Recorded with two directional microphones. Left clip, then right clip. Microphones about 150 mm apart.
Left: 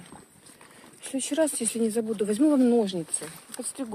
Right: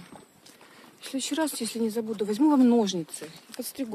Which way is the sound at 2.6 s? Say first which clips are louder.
Even; 25° right (ahead or behind).